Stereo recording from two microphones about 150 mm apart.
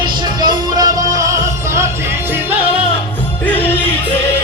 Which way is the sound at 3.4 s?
10° left (ahead or behind).